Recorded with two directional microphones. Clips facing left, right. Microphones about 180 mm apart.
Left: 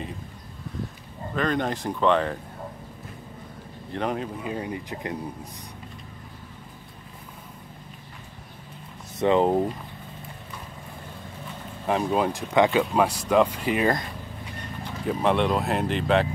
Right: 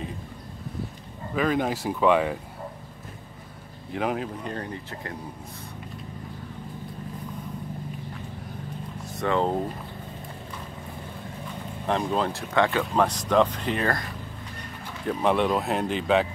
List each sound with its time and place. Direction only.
1.3 s speech: 5° right (ahead or behind)
3.9 s speech: 5° right (ahead or behind); by 5.1 s 15° left (ahead or behind)
9.2 s speech: 20° left (ahead or behind)
11.8 s speech: 10° left (ahead or behind)
15.0 s speech: centre (ahead or behind)